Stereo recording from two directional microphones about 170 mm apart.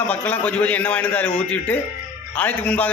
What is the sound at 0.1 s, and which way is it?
A man's voice, 10° left (ahead or behind).